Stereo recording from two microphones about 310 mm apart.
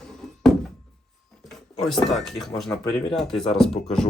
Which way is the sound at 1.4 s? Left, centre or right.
Centre.